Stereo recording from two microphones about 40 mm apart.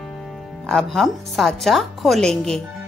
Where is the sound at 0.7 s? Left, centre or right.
Centre.